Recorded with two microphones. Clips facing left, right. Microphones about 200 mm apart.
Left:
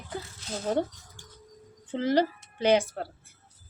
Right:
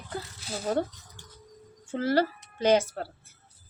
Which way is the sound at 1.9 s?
15° left (ahead or behind).